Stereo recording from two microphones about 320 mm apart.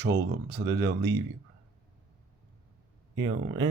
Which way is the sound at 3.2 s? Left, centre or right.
Right.